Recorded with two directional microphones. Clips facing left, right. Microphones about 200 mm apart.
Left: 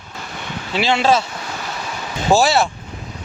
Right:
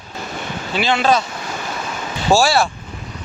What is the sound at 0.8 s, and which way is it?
Speech, 25° left (ahead or behind).